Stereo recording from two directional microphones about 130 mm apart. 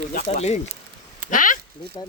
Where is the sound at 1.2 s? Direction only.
90° left.